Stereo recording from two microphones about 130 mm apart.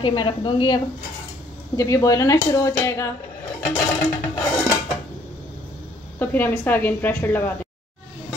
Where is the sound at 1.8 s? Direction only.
25° left (ahead or behind).